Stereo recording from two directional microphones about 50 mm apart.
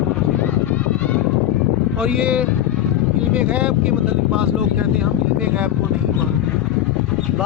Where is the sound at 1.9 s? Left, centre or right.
Right.